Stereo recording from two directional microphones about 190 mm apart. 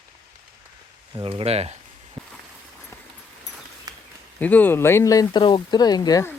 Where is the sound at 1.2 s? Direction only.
30° right (ahead or behind).